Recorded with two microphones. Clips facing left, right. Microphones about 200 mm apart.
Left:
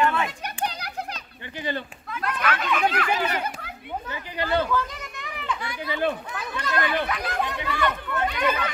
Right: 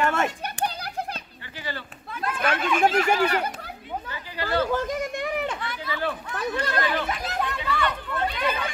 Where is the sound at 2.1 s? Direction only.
30° right (ahead or behind).